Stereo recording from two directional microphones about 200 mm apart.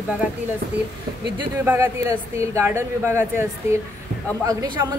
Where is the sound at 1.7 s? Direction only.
15° right (ahead or behind).